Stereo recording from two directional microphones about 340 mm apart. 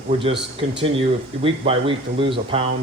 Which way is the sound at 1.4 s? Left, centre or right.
Centre.